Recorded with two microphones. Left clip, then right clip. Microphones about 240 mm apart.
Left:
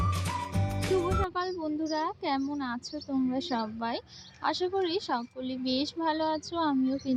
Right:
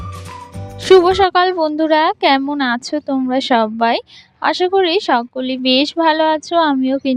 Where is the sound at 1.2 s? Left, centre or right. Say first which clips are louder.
Right 19 dB; right.